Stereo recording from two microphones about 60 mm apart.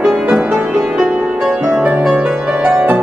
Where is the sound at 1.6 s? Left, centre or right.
Right.